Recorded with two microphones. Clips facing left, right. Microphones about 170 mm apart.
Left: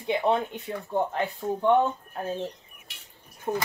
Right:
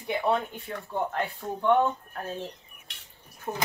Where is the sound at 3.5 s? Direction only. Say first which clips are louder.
Left 5 dB; 20° left (ahead or behind).